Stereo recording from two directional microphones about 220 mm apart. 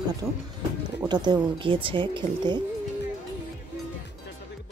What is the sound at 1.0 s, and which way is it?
Speech, 20° right (ahead or behind).